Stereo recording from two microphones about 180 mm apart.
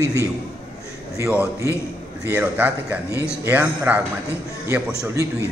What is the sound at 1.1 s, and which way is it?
Speech, 15° right (ahead or behind).